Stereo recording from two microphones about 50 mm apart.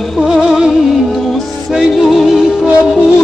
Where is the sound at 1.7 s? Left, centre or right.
Centre.